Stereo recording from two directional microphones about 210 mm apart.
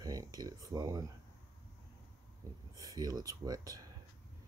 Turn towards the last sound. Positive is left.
turn(degrees=-15)  # may be behind; listen again after turning